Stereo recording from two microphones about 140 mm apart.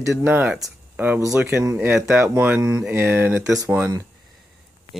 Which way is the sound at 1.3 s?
20° right (ahead or behind).